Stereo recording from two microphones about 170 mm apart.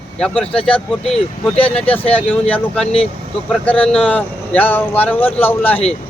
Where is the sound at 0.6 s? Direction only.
5° left (ahead or behind).